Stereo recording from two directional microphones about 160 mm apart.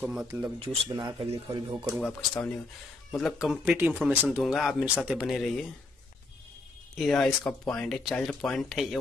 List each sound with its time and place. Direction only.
0.0 s speech: 5° right (ahead or behind)
0.6 s speech: 25° right (ahead or behind)
2.0 s speech: 5° left (ahead or behind)
7.0 s speech: centre (ahead or behind)